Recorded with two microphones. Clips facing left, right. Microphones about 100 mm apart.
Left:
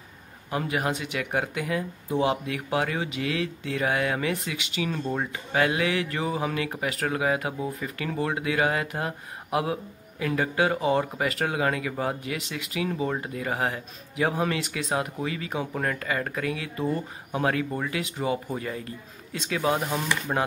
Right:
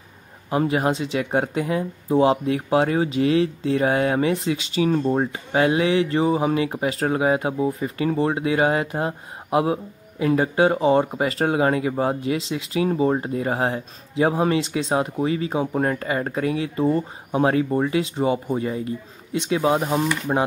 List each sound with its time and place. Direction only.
0.5 s speech: 30° right (ahead or behind)